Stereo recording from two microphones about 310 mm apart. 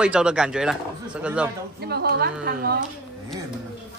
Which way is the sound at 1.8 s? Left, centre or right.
Right.